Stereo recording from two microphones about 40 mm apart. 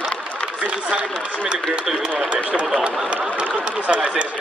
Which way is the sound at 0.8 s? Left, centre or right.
Right.